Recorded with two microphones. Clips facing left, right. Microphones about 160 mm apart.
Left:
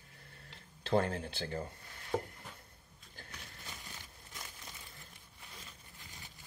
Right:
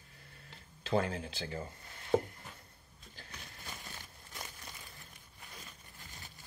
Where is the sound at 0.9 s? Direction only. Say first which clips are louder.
Left 1 dB; 60° left (ahead or behind).